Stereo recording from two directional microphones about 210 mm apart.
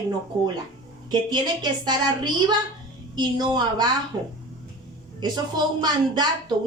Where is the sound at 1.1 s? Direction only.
20° right (ahead or behind).